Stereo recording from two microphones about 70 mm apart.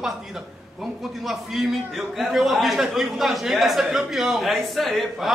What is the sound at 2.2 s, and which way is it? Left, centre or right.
A man's voice, centre.